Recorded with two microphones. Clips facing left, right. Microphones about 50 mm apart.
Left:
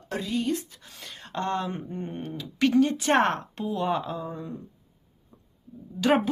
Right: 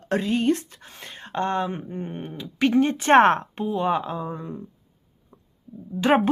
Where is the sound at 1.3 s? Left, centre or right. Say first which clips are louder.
Right 4 dB; right.